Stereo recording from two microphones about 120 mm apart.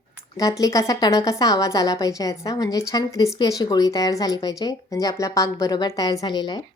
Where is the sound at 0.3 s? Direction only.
30° left (ahead or behind).